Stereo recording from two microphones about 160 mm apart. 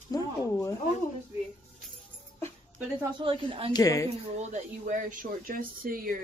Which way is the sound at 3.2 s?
35° right (ahead or behind).